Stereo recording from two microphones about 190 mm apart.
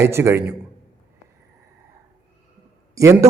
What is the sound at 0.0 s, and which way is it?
Speech, 15° right (ahead or behind).